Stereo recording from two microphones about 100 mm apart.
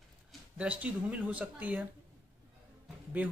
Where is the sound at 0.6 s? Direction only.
10° right (ahead or behind).